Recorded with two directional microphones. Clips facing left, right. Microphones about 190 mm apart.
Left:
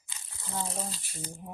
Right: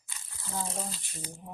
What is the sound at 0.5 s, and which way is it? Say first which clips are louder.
Speech: even; centre (ahead or behind).